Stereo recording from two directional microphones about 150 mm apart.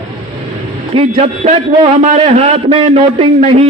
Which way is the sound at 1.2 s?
50° right (ahead or behind).